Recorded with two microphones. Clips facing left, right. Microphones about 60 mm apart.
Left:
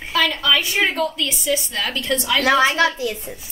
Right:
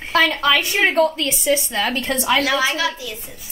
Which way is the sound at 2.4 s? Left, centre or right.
Left.